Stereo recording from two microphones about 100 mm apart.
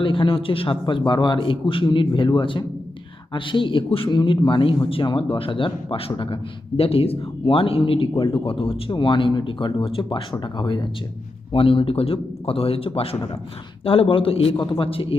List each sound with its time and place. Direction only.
0.0 s a man's voice: 55° left (ahead or behind)
11.5 s speech: 65° left (ahead or behind)
14.5 s a man's voice: 55° left (ahead or behind)